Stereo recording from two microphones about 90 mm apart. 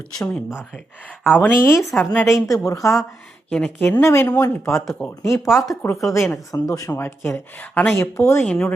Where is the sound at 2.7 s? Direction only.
40° left (ahead or behind).